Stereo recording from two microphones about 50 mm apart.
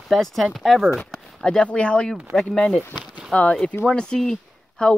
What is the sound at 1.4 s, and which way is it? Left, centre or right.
Speech, centre.